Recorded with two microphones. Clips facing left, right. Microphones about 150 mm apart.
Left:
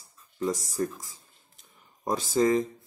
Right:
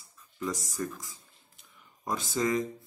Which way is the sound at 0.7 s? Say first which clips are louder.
Left 5 dB; 35° left (ahead or behind).